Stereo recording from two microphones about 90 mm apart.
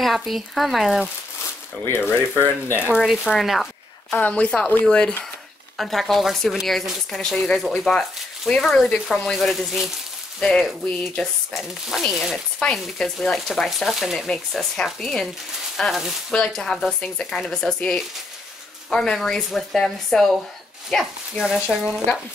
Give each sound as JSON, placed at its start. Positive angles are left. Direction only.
{"t": 0.0, "sound": "speech", "side_deg": 0}
{"t": 1.9, "sound": "speech", "side_deg": 25}
{"t": 3.0, "sound": "speech", "side_deg": 0}
{"t": 4.1, "sound": "a woman's voice", "side_deg": 15}
{"t": 12.5, "sound": "a woman's voice", "side_deg": 10}
{"t": 21.0, "sound": "speech", "side_deg": -5}